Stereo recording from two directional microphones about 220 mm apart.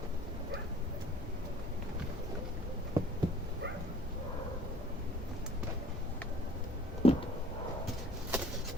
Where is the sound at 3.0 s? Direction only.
15° right (ahead or behind).